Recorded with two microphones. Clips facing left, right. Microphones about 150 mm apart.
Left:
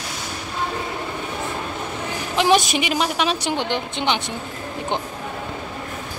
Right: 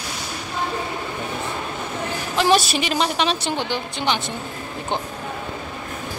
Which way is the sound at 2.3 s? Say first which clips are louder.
Left 1 dB; 15° left (ahead or behind).